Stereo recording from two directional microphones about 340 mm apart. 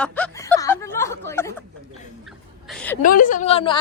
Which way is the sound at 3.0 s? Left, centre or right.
Left.